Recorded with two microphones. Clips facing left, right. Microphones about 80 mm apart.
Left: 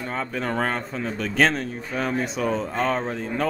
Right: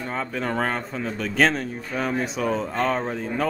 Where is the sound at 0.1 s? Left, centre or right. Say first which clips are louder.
Even; centre.